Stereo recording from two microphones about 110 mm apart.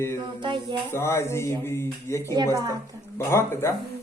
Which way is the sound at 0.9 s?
25° left (ahead or behind).